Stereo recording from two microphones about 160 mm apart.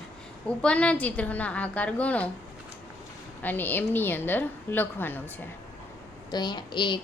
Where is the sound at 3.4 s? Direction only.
10° left (ahead or behind).